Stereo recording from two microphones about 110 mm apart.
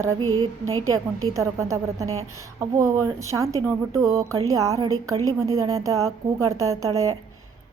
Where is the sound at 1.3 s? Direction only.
25° right (ahead or behind).